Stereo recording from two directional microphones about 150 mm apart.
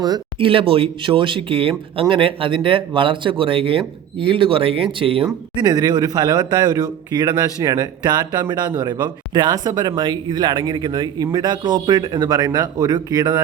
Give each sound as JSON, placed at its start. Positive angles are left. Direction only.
{"t": 0.0, "sound": "speech", "side_deg": -30}
{"t": 5.5, "sound": "speech", "side_deg": -25}